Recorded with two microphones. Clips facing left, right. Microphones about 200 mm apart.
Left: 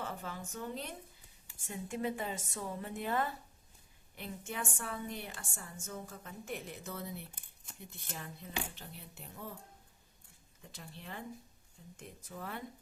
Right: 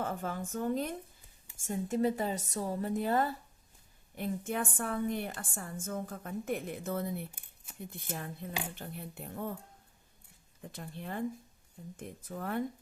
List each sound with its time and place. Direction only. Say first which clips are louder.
0.0 s a woman's voice: right 6 dB; 50° right (ahead or behind)
4.2 s a woman's voice: right 8 dB; 50° right (ahead or behind)
7.3 s shuffling cards: right 3 dB; 10° right (ahead or behind)
8.1 s a woman's voice: right 3 dB; 50° right (ahead or behind)
10.6 s a woman's voice: right 7 dB; 55° right (ahead or behind)